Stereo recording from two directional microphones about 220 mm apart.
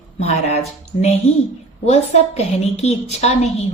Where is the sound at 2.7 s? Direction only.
30° left (ahead or behind).